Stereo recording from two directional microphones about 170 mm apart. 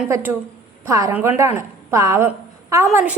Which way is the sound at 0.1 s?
10° right (ahead or behind).